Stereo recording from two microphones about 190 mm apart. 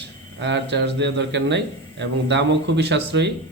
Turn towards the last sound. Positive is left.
turn(degrees=-65)  # may be behind; listen again after turning